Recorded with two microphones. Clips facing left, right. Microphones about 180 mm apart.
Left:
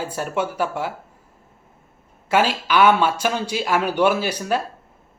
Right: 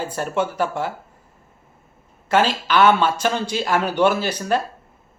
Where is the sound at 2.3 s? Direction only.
10° left (ahead or behind).